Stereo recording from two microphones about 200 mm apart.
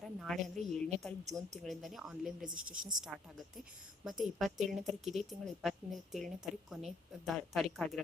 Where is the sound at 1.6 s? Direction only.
Centre (ahead or behind).